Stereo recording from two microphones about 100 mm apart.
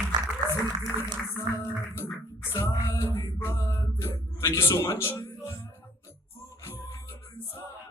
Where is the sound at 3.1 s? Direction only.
25° left (ahead or behind).